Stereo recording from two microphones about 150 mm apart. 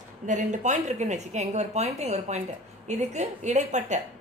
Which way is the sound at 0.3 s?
55° right (ahead or behind).